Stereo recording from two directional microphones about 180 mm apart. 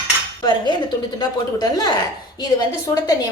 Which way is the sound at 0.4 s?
25° left (ahead or behind).